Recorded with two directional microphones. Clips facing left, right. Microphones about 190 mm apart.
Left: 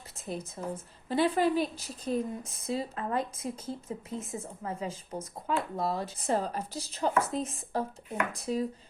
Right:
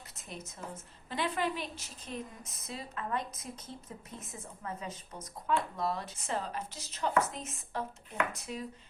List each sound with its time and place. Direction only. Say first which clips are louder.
0.2 s a woman's voice: left 8 dB; 30° left (ahead or behind)